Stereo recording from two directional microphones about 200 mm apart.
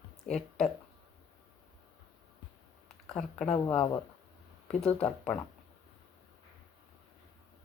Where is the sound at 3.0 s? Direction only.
5° left (ahead or behind).